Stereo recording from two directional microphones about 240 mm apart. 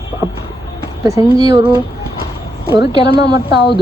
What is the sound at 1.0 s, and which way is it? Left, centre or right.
Speech, centre.